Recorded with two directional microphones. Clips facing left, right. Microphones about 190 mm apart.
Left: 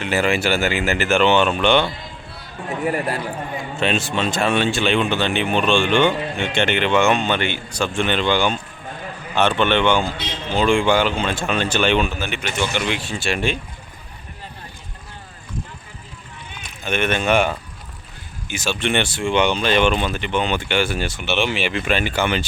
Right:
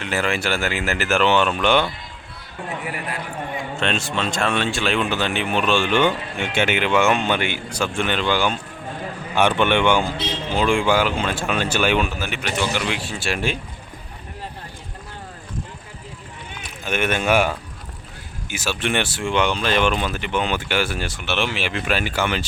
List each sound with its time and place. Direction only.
0.0 s speech: 5° left (ahead or behind)
2.8 s a man's voice: 40° left (ahead or behind)
3.8 s speech: 5° left (ahead or behind)
16.6 s speech: 5° right (ahead or behind)